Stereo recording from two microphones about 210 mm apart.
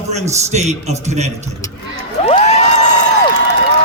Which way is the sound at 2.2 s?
30° left (ahead or behind).